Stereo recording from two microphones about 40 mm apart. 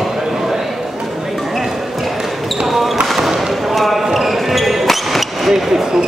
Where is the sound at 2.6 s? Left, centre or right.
Centre.